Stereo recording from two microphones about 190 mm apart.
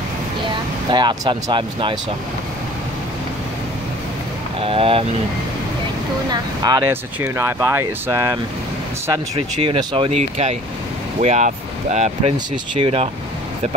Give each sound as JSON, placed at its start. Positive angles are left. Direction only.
{"t": 0.8, "sound": "speech", "side_deg": -25}
{"t": 4.6, "sound": "speech", "side_deg": -30}
{"t": 6.3, "sound": "speech", "side_deg": -20}